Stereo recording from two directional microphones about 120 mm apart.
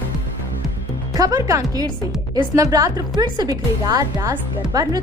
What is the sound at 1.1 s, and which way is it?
Speech, 30° right (ahead or behind).